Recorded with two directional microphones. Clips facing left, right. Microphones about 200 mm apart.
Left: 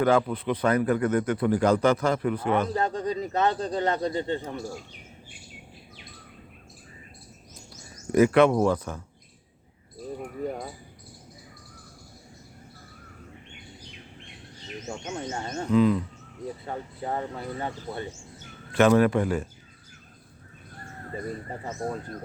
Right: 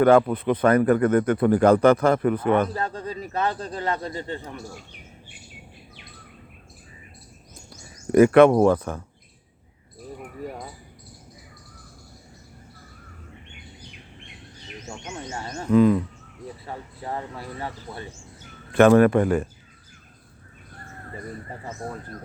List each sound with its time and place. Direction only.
0.0 s speech: 55° right (ahead or behind)
2.7 s speech: 20° left (ahead or behind)
7.7 s speech: 55° right (ahead or behind)
14.8 s speech: 30° left (ahead or behind)
15.7 s speech: 50° right (ahead or behind)
16.6 s speech: 25° left (ahead or behind)
18.7 s speech: 55° right (ahead or behind)